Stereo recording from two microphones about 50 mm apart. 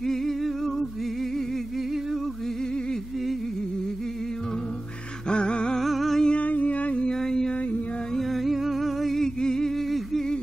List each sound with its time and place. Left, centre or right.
0.0 s music: centre
5.3 s music: centre
5.8 s music: centre
6.2 s music: left
7.1 s mantra: centre
8.1 s music: centre